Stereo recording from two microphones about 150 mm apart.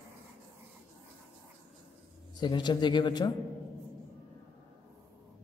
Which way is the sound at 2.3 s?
30° left (ahead or behind).